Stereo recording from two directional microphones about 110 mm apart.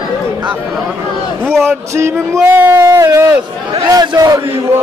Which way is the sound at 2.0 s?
25° right (ahead or behind).